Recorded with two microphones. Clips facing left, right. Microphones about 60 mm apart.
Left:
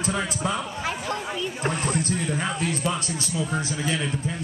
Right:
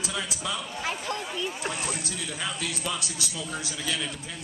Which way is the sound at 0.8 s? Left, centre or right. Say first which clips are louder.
Left 1 dB; centre.